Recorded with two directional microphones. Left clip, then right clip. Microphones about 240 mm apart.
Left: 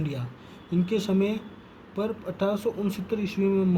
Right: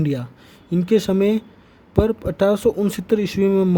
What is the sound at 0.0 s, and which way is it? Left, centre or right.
Speech, right.